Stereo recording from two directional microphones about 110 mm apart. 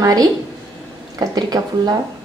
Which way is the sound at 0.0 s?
35° right (ahead or behind).